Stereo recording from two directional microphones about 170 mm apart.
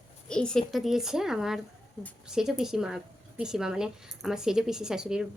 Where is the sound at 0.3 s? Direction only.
5° left (ahead or behind).